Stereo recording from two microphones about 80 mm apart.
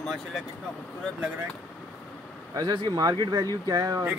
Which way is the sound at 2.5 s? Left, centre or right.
Right.